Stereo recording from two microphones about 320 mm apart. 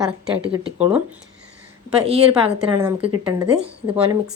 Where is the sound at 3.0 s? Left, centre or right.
Centre.